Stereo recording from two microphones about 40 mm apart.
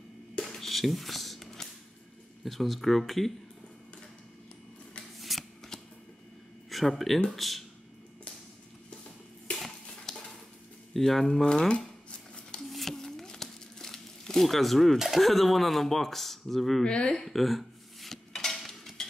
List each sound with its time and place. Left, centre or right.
0.6 s a sound: centre
2.4 s speech: centre
5.3 s shuffling cards: centre
6.7 s speech: centre
10.1 s a sound: centre
10.9 s speech: centre
11.4 s cutlery: left
12.7 s crumpling: centre
15.0 s speech: centre
16.8 s cutlery: left
17.2 s dishes: centre